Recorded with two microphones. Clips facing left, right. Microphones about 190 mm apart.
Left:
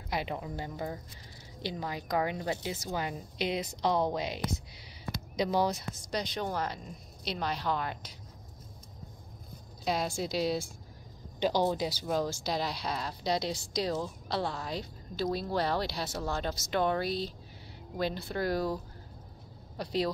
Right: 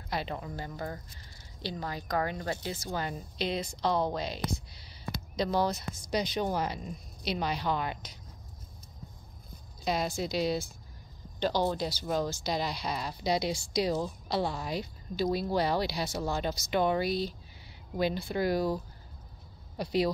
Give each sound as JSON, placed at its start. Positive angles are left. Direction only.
{"t": 0.1, "sound": "speech", "side_deg": 15}
{"t": 5.1, "sound": "a sound", "side_deg": 15}
{"t": 6.1, "sound": "a woman's voice", "side_deg": -5}
{"t": 9.8, "sound": "a woman's voice", "side_deg": 0}
{"t": 19.8, "sound": "a woman's voice", "side_deg": -5}